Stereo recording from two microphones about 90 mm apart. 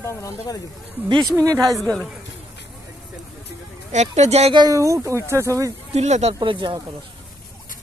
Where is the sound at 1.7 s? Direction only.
5° left (ahead or behind).